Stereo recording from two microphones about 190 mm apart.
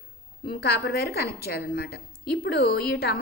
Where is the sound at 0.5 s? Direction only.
60° left (ahead or behind).